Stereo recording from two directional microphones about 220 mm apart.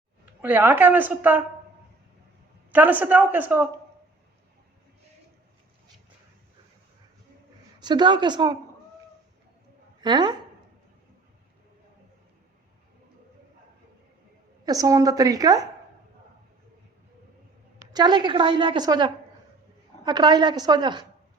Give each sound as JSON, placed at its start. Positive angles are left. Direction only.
{"t": 0.4, "sound": "a woman's voice", "side_deg": -10}
{"t": 2.7, "sound": "a woman's voice", "side_deg": -10}
{"t": 7.8, "sound": "a woman's voice", "side_deg": -20}
{"t": 10.0, "sound": "a woman's voice", "side_deg": -20}
{"t": 14.6, "sound": "a woman's voice", "side_deg": -15}
{"t": 17.9, "sound": "a woman's voice", "side_deg": -20}